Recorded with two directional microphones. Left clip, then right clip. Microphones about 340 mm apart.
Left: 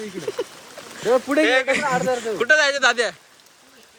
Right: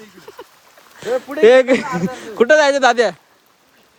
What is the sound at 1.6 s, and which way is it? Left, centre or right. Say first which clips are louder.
Speech: right 5 dB; centre.